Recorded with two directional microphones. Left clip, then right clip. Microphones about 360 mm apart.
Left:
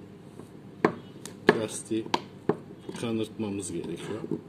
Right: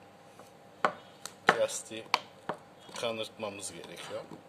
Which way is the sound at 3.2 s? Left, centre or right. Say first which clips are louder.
Left 5 dB; centre.